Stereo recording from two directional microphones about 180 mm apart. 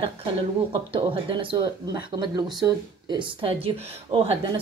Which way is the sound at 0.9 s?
30° right (ahead or behind).